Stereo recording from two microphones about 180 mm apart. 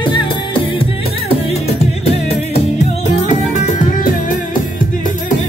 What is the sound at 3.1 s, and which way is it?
Music, 45° left (ahead or behind).